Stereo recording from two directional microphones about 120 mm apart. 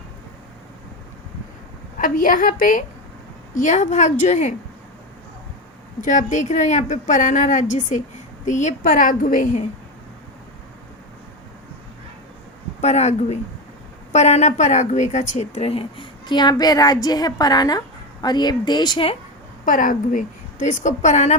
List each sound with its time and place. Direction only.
3.5 s a woman's voice: 90° left
6.1 s a woman's voice: 90° left
12.8 s a woman's voice: 70° left (ahead or behind); by 19.0 s 35° left (ahead or behind)
19.6 s a woman's voice: 90° left